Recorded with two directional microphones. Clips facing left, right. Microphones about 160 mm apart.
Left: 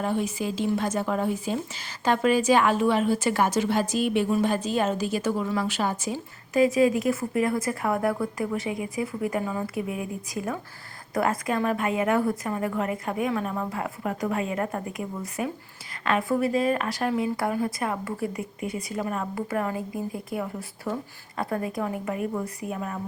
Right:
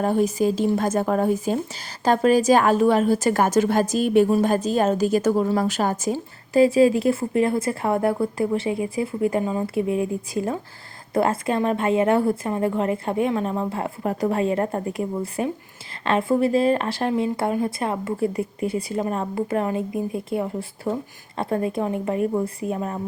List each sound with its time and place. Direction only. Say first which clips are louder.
0.0 s speech: right 7 dB; 40° right (ahead or behind)